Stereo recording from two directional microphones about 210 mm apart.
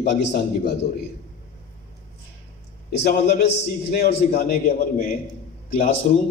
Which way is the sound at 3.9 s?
50° left (ahead or behind).